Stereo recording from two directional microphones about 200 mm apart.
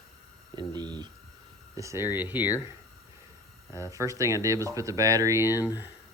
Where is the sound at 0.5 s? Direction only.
20° right (ahead or behind).